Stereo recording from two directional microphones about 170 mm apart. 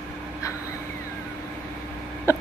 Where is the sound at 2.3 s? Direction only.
15° left (ahead or behind).